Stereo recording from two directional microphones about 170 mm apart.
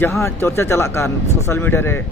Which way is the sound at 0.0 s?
15° left (ahead or behind).